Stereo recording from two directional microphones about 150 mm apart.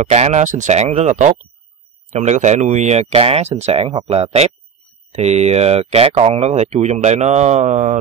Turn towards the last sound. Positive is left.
turn(degrees=-50)  # may be behind; listen again after turning